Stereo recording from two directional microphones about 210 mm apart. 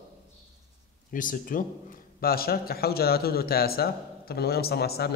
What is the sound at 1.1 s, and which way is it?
A man's voice, 40° left (ahead or behind).